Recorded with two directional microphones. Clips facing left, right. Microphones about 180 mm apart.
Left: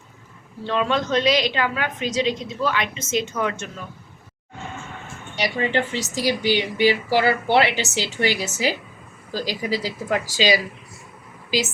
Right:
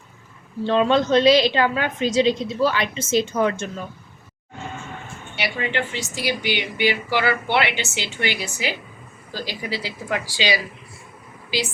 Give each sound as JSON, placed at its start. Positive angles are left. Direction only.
{"t": 0.6, "sound": "a woman's voice", "side_deg": -30}
{"t": 5.4, "sound": "speech", "side_deg": 35}